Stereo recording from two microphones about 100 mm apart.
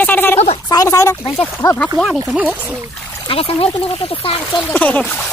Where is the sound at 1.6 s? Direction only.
40° left (ahead or behind).